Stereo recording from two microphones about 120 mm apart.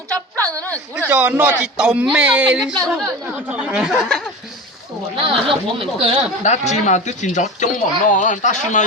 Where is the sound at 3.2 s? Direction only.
15° right (ahead or behind).